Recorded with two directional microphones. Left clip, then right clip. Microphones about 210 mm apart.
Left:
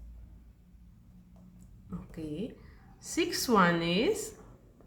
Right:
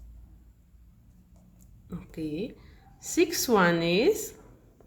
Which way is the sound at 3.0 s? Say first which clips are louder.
Right 6 dB; 35° right (ahead or behind).